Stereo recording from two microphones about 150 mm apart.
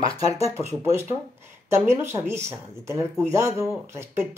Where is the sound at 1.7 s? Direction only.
15° right (ahead or behind).